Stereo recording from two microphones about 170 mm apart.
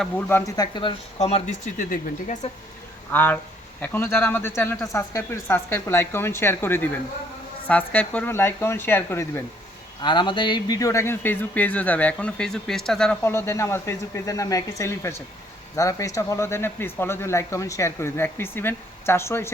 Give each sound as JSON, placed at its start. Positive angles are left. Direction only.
{"t": 0.3, "sound": "speech", "side_deg": 15}
{"t": 3.1, "sound": "speech", "side_deg": 10}
{"t": 10.0, "sound": "speech", "side_deg": 25}